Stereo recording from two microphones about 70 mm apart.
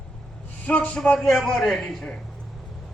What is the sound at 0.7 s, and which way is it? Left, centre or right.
A man's voice, centre.